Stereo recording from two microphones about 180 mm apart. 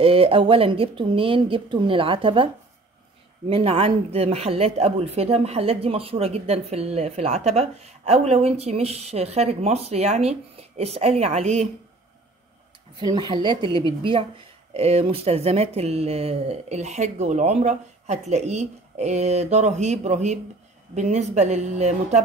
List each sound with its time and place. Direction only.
0.0 s a woman's voice: 30° right (ahead or behind)
13.0 s a woman's voice: 25° right (ahead or behind)